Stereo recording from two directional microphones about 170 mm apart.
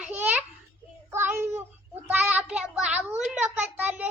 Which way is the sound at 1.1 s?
15° right (ahead or behind).